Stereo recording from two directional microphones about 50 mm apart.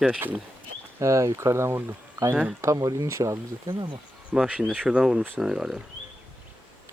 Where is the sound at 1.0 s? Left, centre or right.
Right.